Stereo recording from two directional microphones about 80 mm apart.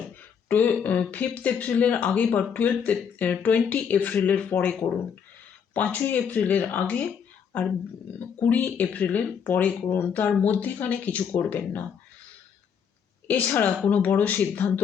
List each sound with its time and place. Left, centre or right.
0.4 s speech: left
13.2 s speech: left